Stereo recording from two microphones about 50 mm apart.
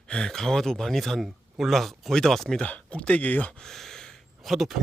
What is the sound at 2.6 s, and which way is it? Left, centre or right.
Speech, left.